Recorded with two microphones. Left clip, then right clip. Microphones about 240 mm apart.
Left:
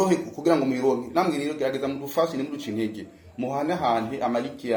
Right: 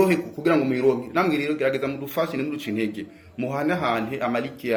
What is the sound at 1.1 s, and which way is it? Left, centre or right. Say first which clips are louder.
Speech: right 2 dB; right.